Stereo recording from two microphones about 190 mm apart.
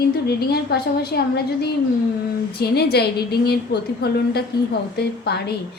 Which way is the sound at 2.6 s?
55° left (ahead or behind).